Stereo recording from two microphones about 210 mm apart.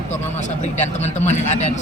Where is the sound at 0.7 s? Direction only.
35° left (ahead or behind).